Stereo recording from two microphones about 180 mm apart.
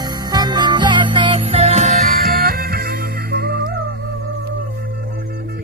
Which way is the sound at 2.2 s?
55° right (ahead or behind).